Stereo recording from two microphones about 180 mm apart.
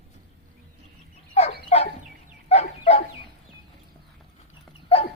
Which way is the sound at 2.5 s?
35° left (ahead or behind).